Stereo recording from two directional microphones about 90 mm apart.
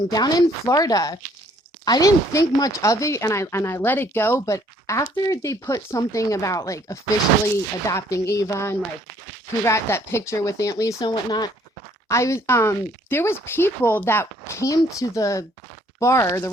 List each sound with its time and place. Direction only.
0.1 s speech: 45° left (ahead or behind)
11.0 s speech: 50° left (ahead or behind)
12.0 s speech: 35° left (ahead or behind)